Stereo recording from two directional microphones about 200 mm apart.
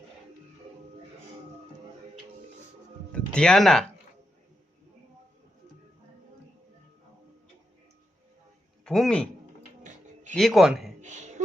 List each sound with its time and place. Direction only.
3.1 s speech: 5° left (ahead or behind)
8.8 s speech: centre (ahead or behind)
10.3 s speech: centre (ahead or behind)
11.0 s a sound: 35° right (ahead or behind)